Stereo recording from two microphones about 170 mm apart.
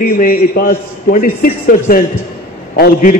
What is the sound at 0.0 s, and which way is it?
A man's voice, 55° left (ahead or behind).